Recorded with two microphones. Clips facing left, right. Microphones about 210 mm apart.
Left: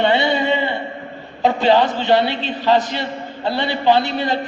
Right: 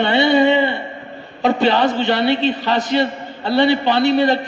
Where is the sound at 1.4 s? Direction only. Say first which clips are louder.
Even; 65° right (ahead or behind).